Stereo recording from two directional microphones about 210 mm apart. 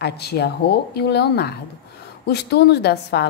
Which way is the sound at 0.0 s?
50° left (ahead or behind).